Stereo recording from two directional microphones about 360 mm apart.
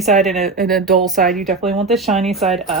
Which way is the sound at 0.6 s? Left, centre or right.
Centre.